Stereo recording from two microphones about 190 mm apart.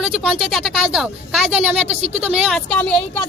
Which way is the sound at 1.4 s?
35° right (ahead or behind).